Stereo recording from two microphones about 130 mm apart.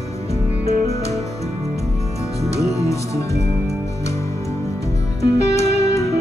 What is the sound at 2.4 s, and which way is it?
Music, 25° left (ahead or behind).